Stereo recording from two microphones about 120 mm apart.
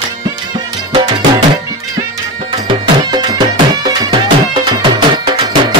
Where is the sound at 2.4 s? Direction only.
45° right (ahead or behind).